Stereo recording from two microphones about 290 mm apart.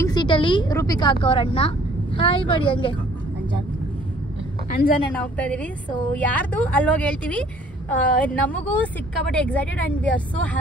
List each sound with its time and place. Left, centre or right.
0.0 s a woman's voice: centre
4.6 s a woman's voice: left
5.1 s a woman's voice: centre